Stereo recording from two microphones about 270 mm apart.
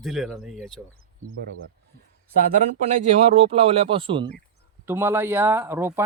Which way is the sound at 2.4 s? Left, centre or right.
Right.